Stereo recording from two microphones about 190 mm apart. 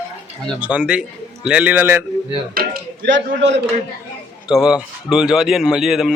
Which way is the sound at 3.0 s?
70° right (ahead or behind).